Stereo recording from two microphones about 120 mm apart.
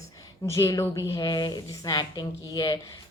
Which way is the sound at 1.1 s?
40° left (ahead or behind).